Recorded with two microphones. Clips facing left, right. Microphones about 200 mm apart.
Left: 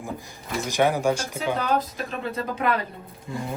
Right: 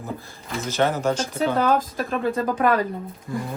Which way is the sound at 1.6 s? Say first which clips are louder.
Right 4 dB; 50° right (ahead or behind).